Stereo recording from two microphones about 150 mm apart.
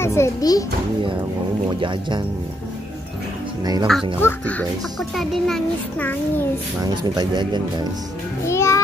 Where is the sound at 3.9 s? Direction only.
Centre (ahead or behind).